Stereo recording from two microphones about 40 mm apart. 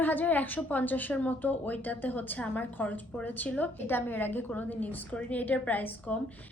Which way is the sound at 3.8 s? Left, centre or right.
Left.